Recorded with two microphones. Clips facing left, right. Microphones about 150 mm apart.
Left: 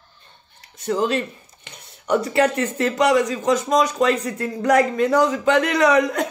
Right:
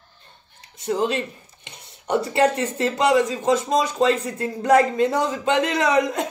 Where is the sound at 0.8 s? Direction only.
20° right (ahead or behind).